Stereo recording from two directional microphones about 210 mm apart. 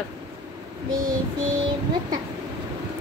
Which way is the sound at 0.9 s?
40° right (ahead or behind).